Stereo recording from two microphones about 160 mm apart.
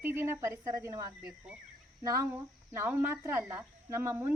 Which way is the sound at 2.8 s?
15° right (ahead or behind).